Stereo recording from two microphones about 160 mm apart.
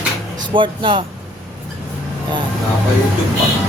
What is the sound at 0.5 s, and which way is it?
Speech, 30° right (ahead or behind).